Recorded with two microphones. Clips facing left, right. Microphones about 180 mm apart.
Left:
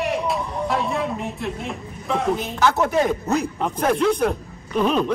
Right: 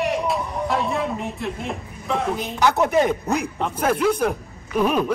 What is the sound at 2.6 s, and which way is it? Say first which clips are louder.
Speech: right 2 dB; 15° right (ahead or behind).